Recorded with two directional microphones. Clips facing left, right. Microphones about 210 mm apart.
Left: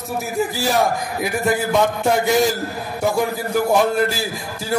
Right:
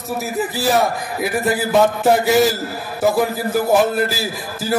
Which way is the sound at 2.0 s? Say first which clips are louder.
Right 3 dB; 5° right (ahead or behind).